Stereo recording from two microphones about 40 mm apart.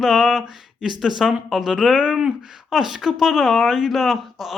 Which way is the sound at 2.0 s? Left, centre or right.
Right.